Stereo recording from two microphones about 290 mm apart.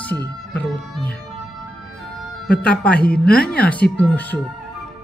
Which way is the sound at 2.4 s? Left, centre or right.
Centre.